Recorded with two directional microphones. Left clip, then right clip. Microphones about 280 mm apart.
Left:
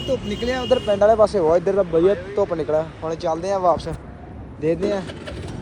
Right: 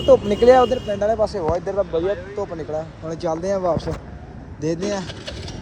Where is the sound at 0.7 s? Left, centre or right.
Left.